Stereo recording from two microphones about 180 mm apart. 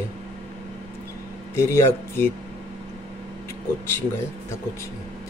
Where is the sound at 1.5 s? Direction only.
15° left (ahead or behind).